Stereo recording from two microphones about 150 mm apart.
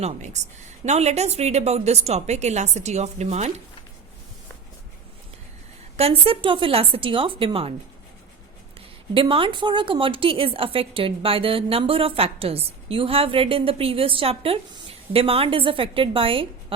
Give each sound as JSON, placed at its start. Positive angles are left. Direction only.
{"t": 0.0, "sound": "a woman's voice", "side_deg": -50}
{"t": 6.0, "sound": "a woman's voice", "side_deg": -40}
{"t": 9.2, "sound": "a woman's voice", "side_deg": -35}